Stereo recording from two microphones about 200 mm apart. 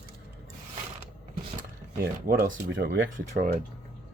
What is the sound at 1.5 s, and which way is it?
Speech, 50° right (ahead or behind).